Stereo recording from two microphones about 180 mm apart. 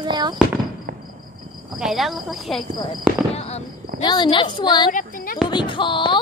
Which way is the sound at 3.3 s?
35° left (ahead or behind).